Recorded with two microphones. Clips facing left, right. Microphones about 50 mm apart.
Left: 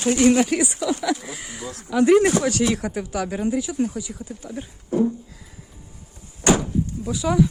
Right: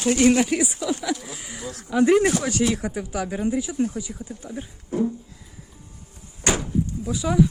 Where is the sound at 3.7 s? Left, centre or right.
Centre.